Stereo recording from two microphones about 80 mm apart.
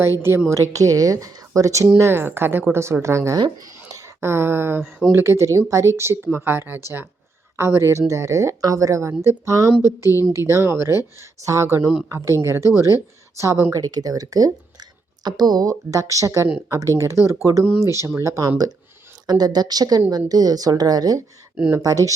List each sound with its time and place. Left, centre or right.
0.2 s a woman's voice: right
0.7 s speech: right
2.0 s a woman's voice: right
13.7 s speech: right
15.2 s a woman's voice: right
15.9 s a woman's voice: right